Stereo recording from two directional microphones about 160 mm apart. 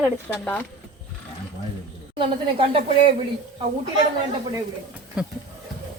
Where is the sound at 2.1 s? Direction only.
35° right (ahead or behind).